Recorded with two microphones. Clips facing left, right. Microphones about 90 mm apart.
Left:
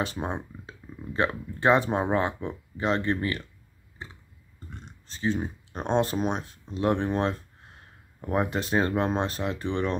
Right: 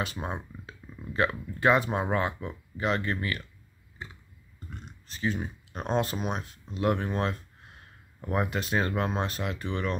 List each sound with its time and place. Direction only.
0.2 s speech: 25° left (ahead or behind)
4.6 s speech: 30° left (ahead or behind)